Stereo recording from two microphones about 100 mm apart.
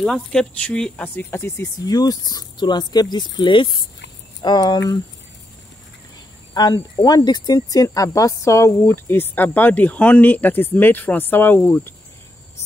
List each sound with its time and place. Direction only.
0.0 s speech: 5° left (ahead or behind)
1.0 s speech: 20° left (ahead or behind)
1.9 s speech: 40° left (ahead or behind)
6.5 s speech: 45° left (ahead or behind); by 11.9 s 25° left (ahead or behind)